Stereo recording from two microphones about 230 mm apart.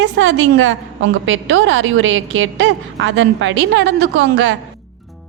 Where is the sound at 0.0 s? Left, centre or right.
Right.